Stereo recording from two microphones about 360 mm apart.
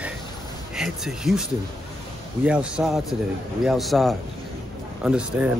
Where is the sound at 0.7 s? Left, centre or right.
Centre.